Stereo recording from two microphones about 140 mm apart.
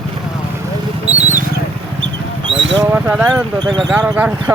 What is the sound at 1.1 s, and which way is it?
Wild animals, 55° right (ahead or behind).